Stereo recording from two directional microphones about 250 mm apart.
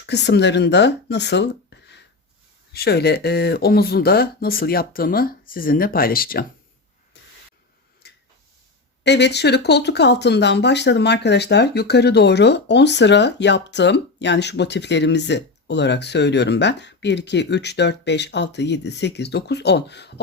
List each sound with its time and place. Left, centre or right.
0.0 s speech: left
8.0 s a sound: left
9.0 s speech: left